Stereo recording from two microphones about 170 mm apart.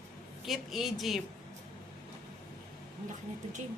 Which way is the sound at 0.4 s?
Centre (ahead or behind).